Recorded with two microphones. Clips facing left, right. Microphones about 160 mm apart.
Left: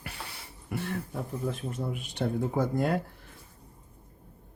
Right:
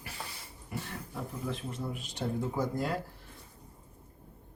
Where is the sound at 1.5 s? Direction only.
60° left (ahead or behind).